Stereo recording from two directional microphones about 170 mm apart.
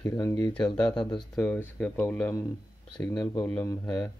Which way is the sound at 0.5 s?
5° left (ahead or behind).